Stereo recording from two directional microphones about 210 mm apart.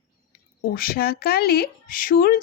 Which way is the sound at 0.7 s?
45° left (ahead or behind).